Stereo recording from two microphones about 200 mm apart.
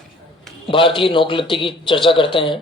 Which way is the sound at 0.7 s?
25° left (ahead or behind).